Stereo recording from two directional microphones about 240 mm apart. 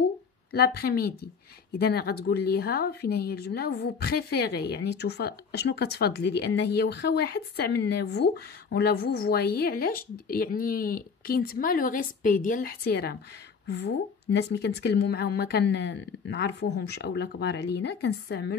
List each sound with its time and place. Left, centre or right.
0.5 s speech: left